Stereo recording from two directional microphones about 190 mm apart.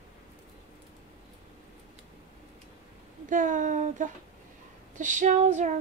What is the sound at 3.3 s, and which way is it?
Speech, 45° right (ahead or behind).